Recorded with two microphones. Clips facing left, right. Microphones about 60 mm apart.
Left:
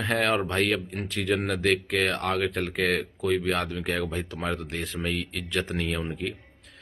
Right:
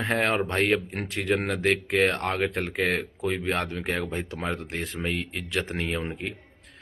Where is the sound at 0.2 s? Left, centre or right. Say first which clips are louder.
Even; right.